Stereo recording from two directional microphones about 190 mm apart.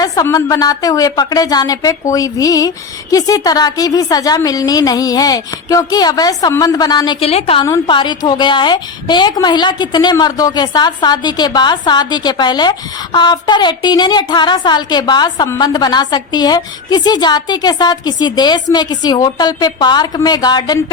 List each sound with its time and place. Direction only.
0.0 s a woman's voice: 20° left (ahead or behind)